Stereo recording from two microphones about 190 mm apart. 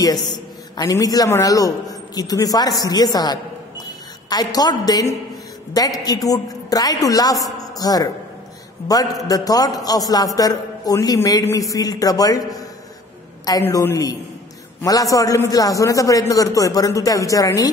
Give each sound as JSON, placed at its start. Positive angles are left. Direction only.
{"t": 0.0, "sound": "a man's voice", "side_deg": 20}